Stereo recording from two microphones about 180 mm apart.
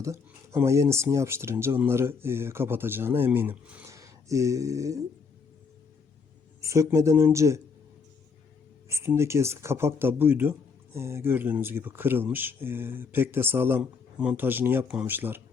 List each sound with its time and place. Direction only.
0.0 s speech: 15° right (ahead or behind)
6.6 s speech: 15° right (ahead or behind)
8.9 s speech: 15° right (ahead or behind)